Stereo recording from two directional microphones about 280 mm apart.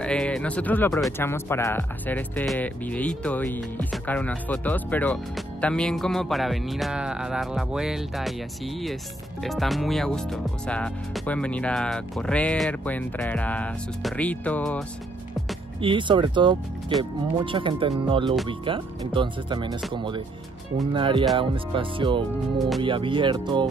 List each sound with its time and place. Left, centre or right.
0.0 s speech: centre
15.8 s speech: centre